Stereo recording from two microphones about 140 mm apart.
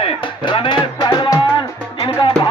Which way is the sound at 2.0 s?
40° left (ahead or behind).